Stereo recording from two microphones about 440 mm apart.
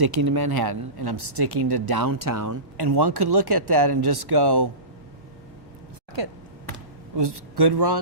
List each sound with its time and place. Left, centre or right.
0.0 s speech: right
2.7 s speech: right
6.2 s speech: right